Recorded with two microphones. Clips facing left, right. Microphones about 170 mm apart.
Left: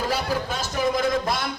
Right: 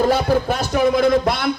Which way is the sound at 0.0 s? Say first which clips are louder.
Right 9 dB; 60° right (ahead or behind).